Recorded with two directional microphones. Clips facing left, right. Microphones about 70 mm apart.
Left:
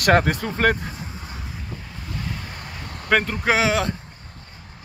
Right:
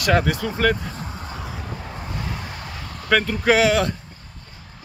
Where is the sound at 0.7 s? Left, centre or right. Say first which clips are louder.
Right 2 dB; right.